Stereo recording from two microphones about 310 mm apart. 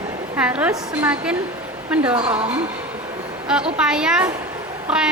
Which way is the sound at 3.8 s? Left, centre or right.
Centre.